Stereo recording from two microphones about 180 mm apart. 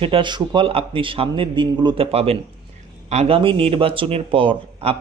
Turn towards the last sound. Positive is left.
turn(degrees=-30)  # may be behind; listen again after turning